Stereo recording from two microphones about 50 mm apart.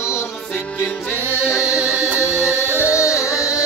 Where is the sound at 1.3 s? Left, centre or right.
Centre.